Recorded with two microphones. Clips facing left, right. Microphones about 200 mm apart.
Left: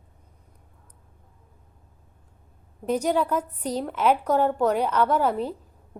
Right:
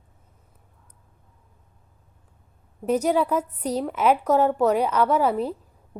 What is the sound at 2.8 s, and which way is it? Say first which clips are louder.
A woman's voice: right 2 dB; 5° right (ahead or behind).